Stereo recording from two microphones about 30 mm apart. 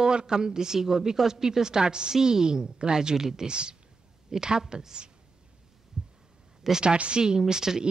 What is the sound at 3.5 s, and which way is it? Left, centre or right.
A woman's voice, right.